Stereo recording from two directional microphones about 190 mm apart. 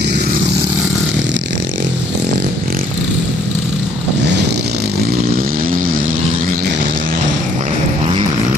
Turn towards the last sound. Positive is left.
turn(degrees=-50)  # may be behind; listen again after turning